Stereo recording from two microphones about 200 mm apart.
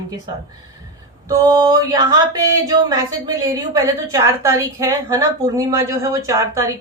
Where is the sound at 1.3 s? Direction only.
20° right (ahead or behind).